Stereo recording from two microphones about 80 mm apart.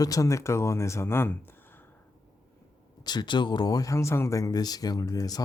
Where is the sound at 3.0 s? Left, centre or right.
Left.